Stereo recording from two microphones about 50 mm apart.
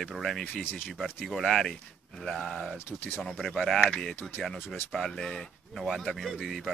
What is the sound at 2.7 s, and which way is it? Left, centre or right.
Speech, left.